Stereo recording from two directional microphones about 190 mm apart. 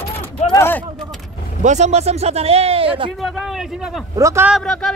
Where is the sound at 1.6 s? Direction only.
40° right (ahead or behind).